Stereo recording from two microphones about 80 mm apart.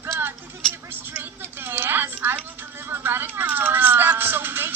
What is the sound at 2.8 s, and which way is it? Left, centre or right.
Music, right.